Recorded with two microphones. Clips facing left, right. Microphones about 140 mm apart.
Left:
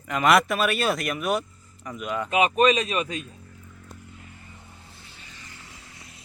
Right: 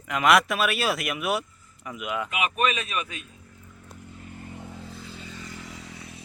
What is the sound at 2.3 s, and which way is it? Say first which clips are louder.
Speech: left 8 dB; 35° left (ahead or behind).